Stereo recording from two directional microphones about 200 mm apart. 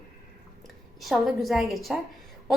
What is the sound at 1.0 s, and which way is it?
Speech, centre (ahead or behind).